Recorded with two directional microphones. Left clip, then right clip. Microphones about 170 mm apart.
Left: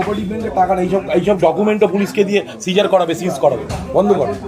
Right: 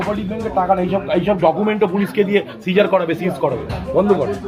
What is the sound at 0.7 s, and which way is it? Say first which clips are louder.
A man's voice: left 1 dB; 55° right (ahead or behind).